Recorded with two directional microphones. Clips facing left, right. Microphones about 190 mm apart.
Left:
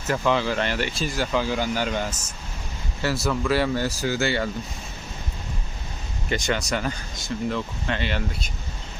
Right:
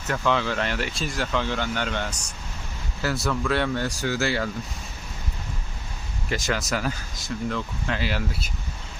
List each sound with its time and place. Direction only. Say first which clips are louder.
0.1 s speech: left 2 dB; 5° left (ahead or behind)
6.2 s speech: left 2 dB; centre (ahead or behind)